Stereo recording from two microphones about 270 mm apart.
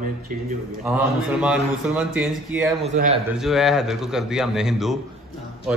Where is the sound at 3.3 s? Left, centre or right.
Centre.